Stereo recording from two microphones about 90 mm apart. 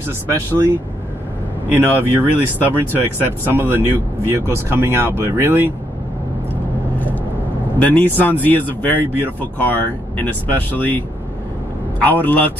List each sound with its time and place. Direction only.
1.7 s speech: 25° right (ahead or behind)
7.8 s speech: 20° left (ahead or behind)